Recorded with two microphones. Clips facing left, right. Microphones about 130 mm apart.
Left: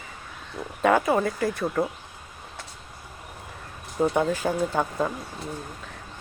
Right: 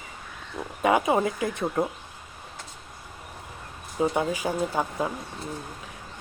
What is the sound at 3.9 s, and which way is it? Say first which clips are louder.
Speech: left 2 dB; 5° right (ahead or behind).